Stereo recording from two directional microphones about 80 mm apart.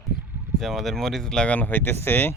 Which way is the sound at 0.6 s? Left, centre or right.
Centre.